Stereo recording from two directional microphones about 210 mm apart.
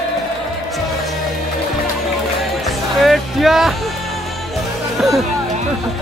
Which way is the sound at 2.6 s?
Centre (ahead or behind).